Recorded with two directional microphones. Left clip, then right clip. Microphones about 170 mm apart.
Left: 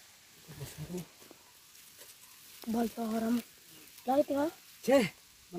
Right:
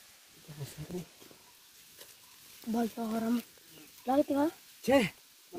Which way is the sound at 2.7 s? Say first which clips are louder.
Even; 35° right (ahead or behind).